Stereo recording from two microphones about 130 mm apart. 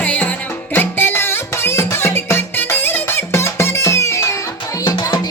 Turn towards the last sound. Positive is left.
turn(degrees=30)  # may be behind; listen again after turning